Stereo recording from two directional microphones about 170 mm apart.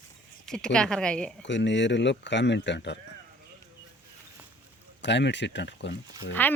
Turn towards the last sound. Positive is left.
turn(degrees=10)  # may be behind; listen again after turning